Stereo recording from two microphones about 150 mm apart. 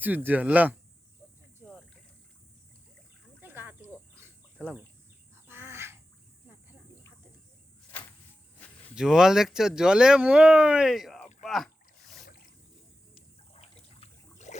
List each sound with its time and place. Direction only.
0.0 s speech: 10° right (ahead or behind)
3.4 s a sound: 15° right (ahead or behind)
4.6 s speech: 5° right (ahead or behind)
5.5 s bird: 15° right (ahead or behind)
9.0 s speech: 5° right (ahead or behind)
11.4 s rowboat: centre (ahead or behind)
12.2 s a sound: 70° left (ahead or behind)
13.5 s trickle: 45° left (ahead or behind)